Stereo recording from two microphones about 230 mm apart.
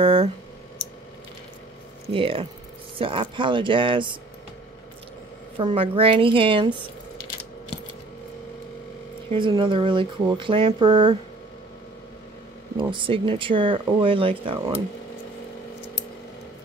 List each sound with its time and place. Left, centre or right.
0.0 s a sound: right
2.1 s speech: right
5.6 s speech: right
9.3 s speech: right
12.7 s speech: right